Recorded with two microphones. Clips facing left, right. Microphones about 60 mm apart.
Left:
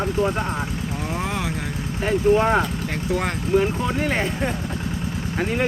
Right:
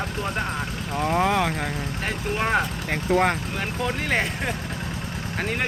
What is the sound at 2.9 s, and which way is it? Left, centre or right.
Speech, right.